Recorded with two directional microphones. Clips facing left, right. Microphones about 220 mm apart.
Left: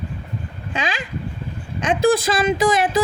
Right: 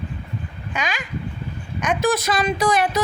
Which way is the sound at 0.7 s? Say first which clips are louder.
Left 2 dB; 30° left (ahead or behind).